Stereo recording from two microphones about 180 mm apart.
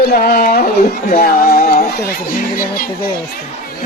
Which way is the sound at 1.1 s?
55° left (ahead or behind).